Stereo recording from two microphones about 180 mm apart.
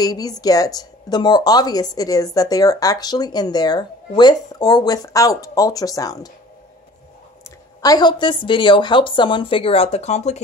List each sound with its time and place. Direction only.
0.0 s a woman's voice: 20° left (ahead or behind)
7.8 s a woman's voice: 20° left (ahead or behind); by 10.4 s 40° left (ahead or behind)